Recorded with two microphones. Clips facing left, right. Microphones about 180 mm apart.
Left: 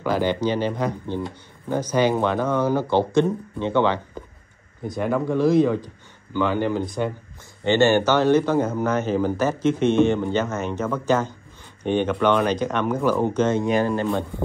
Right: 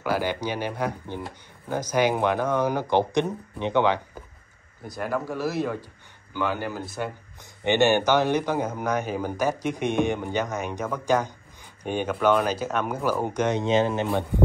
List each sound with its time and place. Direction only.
0.0 s speech: 10° right (ahead or behind)
4.8 s speech: centre (ahead or behind)
7.6 s speech: 15° right (ahead or behind)